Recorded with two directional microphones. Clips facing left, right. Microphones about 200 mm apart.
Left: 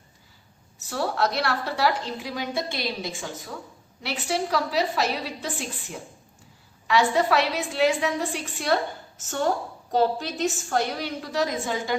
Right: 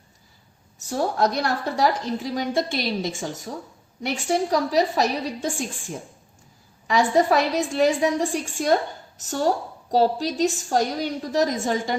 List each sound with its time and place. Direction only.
0.8 s a woman's voice: 45° right (ahead or behind)